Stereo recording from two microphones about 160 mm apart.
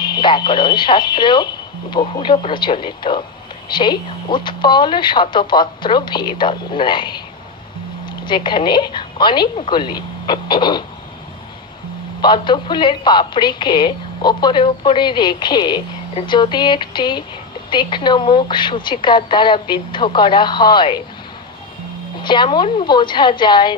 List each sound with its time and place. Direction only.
0.0 s a woman's voice: 30° left (ahead or behind)
8.3 s a woman's voice: 30° left (ahead or behind)
12.2 s a woman's voice: 30° left (ahead or behind)
22.2 s a woman's voice: 30° left (ahead or behind)